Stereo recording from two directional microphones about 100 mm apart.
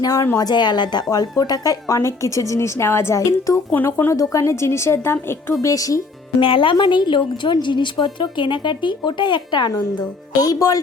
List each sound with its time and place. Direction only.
0.0 s a woman's voice: 35° left (ahead or behind)
3.7 s speech: 20° left (ahead or behind)
4.1 s speech: 35° left (ahead or behind)
5.6 s speech: 35° left (ahead or behind)
6.4 s speech: 60° left (ahead or behind)
6.7 s a woman's voice: 50° left (ahead or behind)
10.4 s speech: 40° left (ahead or behind)